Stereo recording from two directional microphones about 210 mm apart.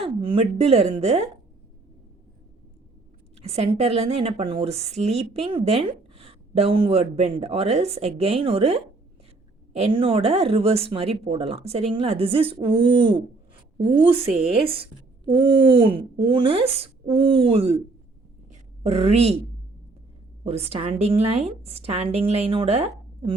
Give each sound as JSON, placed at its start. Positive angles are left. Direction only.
{"t": 0.0, "sound": "speech", "side_deg": -25}
{"t": 3.4, "sound": "speech", "side_deg": -30}
{"t": 18.8, "sound": "a woman's voice", "side_deg": -30}
{"t": 20.4, "sound": "speech", "side_deg": -30}